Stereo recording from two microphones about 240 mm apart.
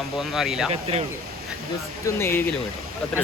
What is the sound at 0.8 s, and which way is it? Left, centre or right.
Speech, right.